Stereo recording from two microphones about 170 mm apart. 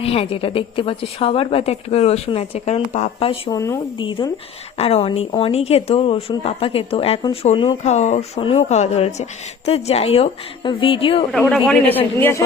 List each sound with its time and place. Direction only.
0.0 s a woman's voice: 35° left (ahead or behind)
3.5 s a woman's voice: 20° left (ahead or behind)
7.8 s a woman's voice: 40° left (ahead or behind)
11.3 s a man's voice: 5° left (ahead or behind)